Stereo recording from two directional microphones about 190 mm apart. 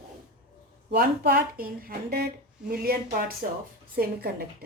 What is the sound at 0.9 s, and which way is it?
A woman's voice, 55° right (ahead or behind).